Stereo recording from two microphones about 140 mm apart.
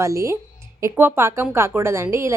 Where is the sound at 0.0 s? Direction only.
20° right (ahead or behind).